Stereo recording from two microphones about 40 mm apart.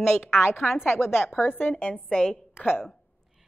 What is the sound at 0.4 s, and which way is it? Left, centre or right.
Speech, left.